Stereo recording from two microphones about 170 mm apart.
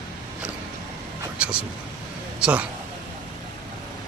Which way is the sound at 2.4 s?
5° right (ahead or behind).